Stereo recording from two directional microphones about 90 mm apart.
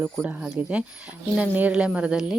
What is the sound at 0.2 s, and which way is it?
Speech, 20° right (ahead or behind).